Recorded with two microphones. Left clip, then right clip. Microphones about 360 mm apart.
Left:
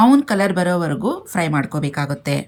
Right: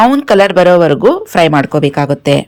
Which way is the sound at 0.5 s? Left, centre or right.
Right.